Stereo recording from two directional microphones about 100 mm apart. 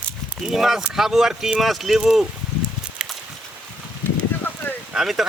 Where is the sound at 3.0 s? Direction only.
5° right (ahead or behind).